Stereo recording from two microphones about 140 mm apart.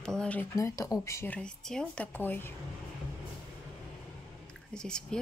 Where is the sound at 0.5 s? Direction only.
20° left (ahead or behind).